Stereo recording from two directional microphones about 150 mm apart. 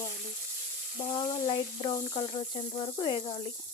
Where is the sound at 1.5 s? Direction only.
30° left (ahead or behind).